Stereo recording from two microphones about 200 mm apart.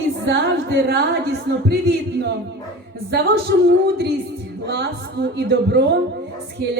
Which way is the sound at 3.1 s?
60° right (ahead or behind).